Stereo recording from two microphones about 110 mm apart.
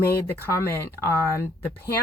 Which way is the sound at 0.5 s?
25° left (ahead or behind).